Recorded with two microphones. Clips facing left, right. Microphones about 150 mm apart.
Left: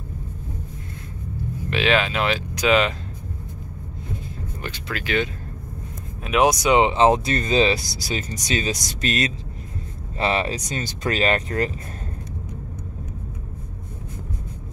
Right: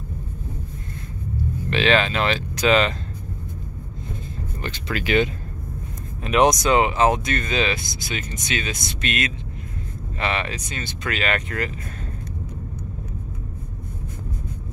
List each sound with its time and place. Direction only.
1.7 s speech: 5° left (ahead or behind)
4.6 s a sound: 10° left (ahead or behind)
5.0 s speech: 20° right (ahead or behind)
6.2 s speech: 5° left (ahead or behind)
6.8 s speech: 25° left (ahead or behind)